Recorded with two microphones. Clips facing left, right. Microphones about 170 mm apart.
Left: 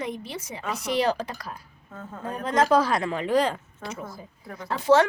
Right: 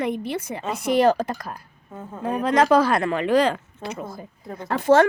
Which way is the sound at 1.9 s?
15° right (ahead or behind).